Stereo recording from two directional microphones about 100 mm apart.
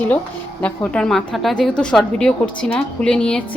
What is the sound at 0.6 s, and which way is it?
A woman's voice, 10° left (ahead or behind).